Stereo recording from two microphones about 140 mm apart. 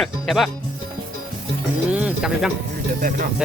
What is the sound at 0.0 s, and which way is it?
Speech, centre (ahead or behind).